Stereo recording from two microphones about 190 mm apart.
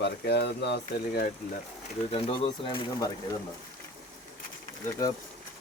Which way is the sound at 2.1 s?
30° left (ahead or behind).